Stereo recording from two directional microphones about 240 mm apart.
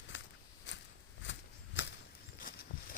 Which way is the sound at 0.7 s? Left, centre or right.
Left.